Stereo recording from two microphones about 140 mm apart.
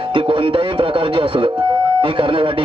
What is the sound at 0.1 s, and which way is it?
A man's voice, 40° right (ahead or behind).